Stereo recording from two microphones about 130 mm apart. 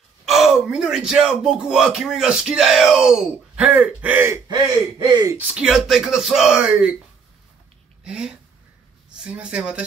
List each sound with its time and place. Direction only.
0.2 s speech: centre (ahead or behind)
4.5 s speech: 35° right (ahead or behind)
5.5 s speech: 5° right (ahead or behind)
8.0 s speech: 5° right (ahead or behind)